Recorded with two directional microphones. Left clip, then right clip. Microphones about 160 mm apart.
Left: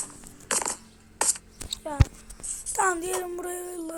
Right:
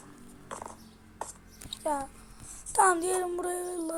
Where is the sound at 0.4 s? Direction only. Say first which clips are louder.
Left 12 dB; 60° left (ahead or behind).